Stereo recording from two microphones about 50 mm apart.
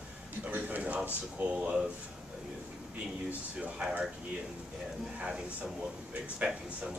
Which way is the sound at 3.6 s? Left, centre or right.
Right.